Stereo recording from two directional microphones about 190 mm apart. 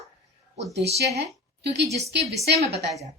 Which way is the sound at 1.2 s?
60° right (ahead or behind).